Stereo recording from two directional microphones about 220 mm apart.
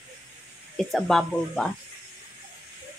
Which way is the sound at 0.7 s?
Centre (ahead or behind).